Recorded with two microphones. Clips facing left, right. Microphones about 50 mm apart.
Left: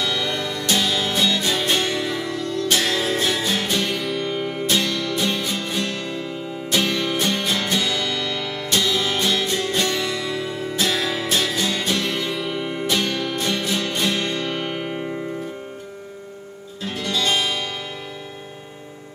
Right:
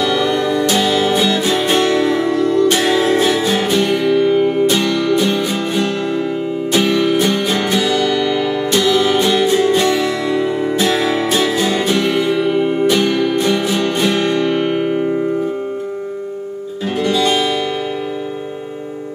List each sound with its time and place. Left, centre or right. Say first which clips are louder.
0.0 s music: right 9 dB; centre
16.8 s music: right 8 dB; centre